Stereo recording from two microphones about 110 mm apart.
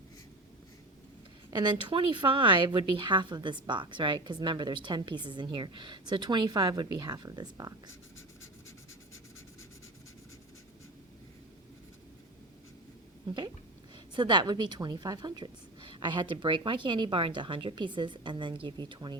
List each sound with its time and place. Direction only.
1.5 s speech: 40° right (ahead or behind)
13.2 s a sound: 40° right (ahead or behind)
14.2 s speech: 45° right (ahead or behind)